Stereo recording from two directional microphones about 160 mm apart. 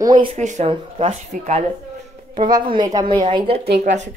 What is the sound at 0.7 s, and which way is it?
Speech, 40° right (ahead or behind).